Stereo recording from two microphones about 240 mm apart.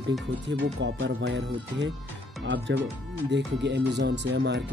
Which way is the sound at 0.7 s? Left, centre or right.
Right.